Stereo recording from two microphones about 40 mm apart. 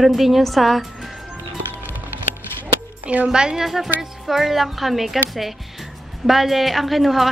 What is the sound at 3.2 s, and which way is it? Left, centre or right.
Speech, centre.